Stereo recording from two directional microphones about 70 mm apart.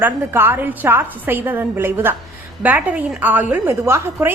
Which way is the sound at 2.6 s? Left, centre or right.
Right.